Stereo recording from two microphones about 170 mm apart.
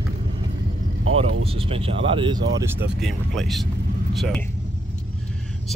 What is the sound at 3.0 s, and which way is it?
Speech, centre (ahead or behind).